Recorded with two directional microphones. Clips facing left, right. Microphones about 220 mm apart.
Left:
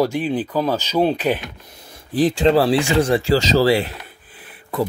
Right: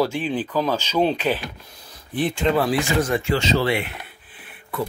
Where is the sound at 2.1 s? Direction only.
35° left (ahead or behind).